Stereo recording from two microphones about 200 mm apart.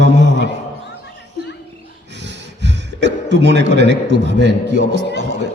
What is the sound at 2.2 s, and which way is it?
A man's voice, 60° right (ahead or behind).